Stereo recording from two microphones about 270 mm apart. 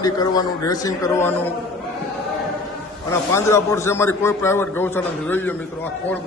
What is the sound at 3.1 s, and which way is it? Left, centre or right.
A man's voice, centre.